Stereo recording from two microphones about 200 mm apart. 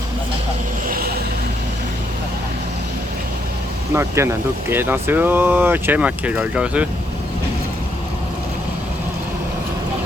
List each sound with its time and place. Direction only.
0.9 s vehicle: 45° right (ahead or behind)
3.9 s speech: 15° right (ahead or behind)